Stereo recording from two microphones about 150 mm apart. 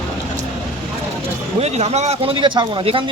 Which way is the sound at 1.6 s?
45° right (ahead or behind).